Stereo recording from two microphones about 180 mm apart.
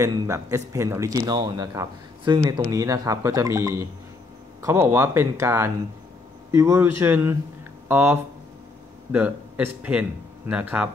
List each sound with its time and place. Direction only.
0.0 s a man's voice: 15° right (ahead or behind)